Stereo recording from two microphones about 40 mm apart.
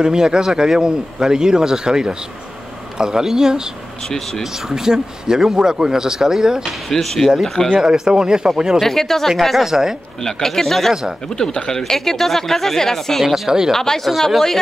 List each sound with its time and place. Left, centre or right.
0.0 s speech: centre
6.9 s speech: centre
7.8 s speech: centre
8.8 s speech: centre
9.7 s speech: centre
10.2 s speech: centre
10.9 s speech: centre
11.3 s speech: centre